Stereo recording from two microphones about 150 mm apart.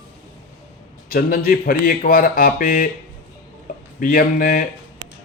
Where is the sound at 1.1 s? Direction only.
75° left (ahead or behind).